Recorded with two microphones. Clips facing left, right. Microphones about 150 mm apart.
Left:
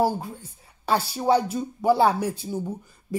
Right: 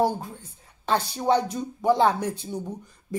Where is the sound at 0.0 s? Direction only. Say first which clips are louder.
Left 1 dB; 10° left (ahead or behind).